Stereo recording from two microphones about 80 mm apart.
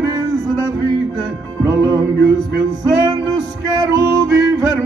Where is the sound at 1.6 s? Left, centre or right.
Right.